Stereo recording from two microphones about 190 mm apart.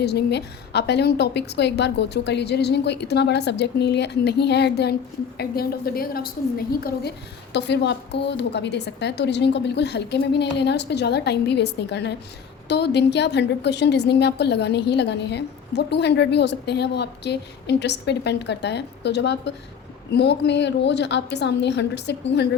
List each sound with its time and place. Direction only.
0.0 s a woman's voice: 60° left (ahead or behind)
7.5 s a woman's voice: 65° left (ahead or behind)